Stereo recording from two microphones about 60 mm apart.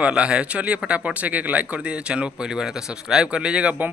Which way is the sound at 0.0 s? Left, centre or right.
Centre.